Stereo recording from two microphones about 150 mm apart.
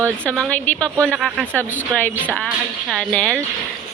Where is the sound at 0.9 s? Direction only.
10° right (ahead or behind).